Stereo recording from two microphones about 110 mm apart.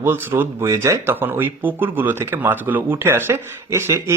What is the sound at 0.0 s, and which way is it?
Speech, 20° right (ahead or behind).